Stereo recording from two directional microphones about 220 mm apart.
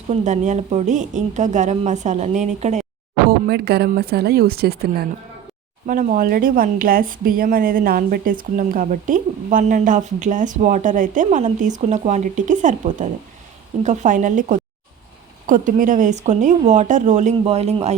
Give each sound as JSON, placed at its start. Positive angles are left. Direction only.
{"t": 0.1, "sound": "speech", "side_deg": -30}
{"t": 3.2, "sound": "speech", "side_deg": -45}